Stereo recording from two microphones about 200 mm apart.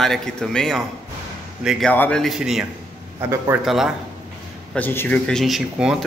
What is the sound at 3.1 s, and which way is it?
Speech, 15° right (ahead or behind).